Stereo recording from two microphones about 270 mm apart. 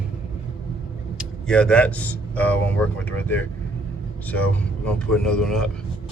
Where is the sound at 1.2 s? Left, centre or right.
Centre.